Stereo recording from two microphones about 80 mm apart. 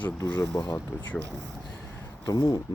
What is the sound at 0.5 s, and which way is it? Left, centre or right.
Speech, left.